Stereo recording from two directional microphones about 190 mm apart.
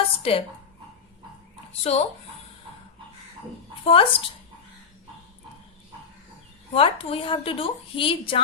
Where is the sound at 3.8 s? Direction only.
30° left (ahead or behind).